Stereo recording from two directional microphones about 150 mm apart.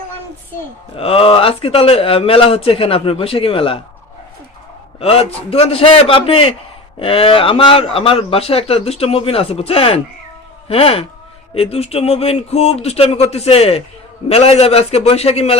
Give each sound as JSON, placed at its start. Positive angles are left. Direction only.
{"t": 0.9, "sound": "a man's voice", "side_deg": 40}
{"t": 4.9, "sound": "a man's voice", "side_deg": 40}